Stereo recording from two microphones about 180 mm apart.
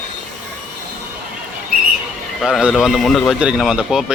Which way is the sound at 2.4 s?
5° right (ahead or behind).